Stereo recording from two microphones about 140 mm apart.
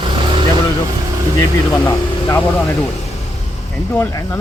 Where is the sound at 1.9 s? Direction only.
20° left (ahead or behind).